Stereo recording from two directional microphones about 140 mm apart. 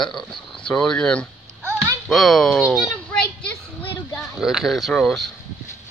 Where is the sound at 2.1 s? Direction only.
Centre (ahead or behind).